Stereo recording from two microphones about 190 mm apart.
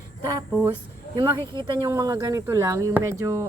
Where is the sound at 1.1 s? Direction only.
25° right (ahead or behind).